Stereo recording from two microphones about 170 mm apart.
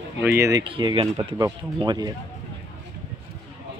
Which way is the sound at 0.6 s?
30° right (ahead or behind).